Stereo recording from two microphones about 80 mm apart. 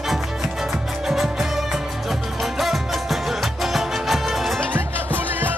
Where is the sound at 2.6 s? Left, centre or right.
Centre.